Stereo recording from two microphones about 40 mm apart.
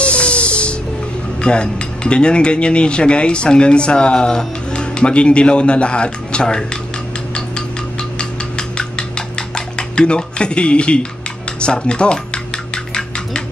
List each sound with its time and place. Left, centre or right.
0.0 s music: left
1.4 s speech: left
8.2 s ratchet: left
9.8 s speech: left
12.7 s a sound: centre